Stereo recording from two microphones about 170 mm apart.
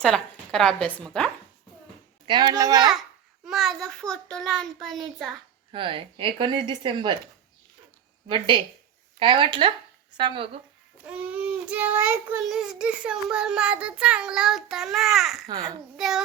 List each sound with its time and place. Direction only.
0.0 s speech: 5° left (ahead or behind)
2.2 s speech: 25° right (ahead or behind)
3.4 s child singing: centre (ahead or behind)
5.7 s speech: 30° right (ahead or behind)
8.3 s speech: 30° right (ahead or behind)
11.0 s a child's voice: 10° right (ahead or behind)
12.5 s child singing: 5° right (ahead or behind)